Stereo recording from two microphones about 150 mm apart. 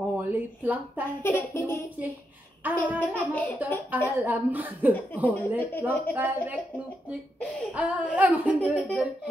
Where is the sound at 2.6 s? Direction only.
10° right (ahead or behind).